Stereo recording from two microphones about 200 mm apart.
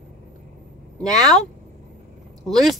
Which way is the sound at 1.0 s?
Centre (ahead or behind).